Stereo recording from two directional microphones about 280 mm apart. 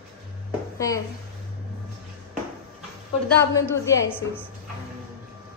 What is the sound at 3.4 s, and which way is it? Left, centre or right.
Speech, centre.